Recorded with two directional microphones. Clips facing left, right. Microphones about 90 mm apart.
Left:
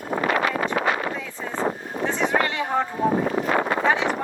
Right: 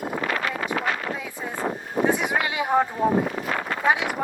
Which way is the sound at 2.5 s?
10° right (ahead or behind).